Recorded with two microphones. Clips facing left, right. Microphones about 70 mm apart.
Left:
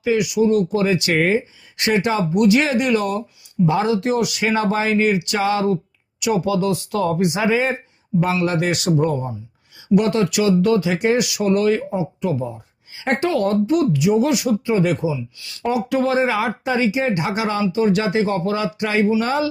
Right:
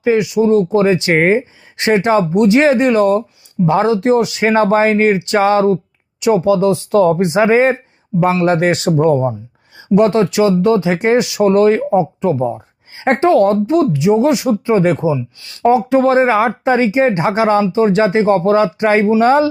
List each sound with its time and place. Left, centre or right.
0.0 s speech: right